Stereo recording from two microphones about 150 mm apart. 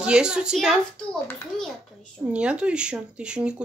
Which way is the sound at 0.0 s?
5° right (ahead or behind).